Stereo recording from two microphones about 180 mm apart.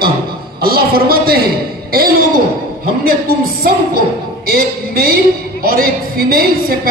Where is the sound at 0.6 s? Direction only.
55° right (ahead or behind).